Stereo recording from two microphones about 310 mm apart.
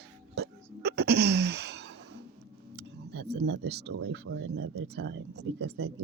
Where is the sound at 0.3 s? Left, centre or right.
Right.